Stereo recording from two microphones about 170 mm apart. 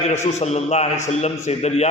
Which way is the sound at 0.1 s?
40° left (ahead or behind).